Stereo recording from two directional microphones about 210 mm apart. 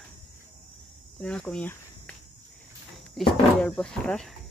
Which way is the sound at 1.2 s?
5° left (ahead or behind).